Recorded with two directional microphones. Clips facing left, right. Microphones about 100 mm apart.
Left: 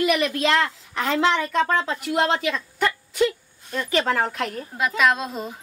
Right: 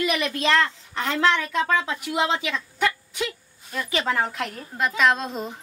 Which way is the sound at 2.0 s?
Centre (ahead or behind).